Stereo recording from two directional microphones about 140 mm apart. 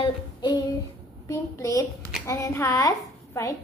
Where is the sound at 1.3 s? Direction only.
25° left (ahead or behind).